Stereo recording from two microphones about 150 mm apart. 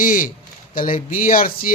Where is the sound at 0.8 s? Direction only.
65° left (ahead or behind).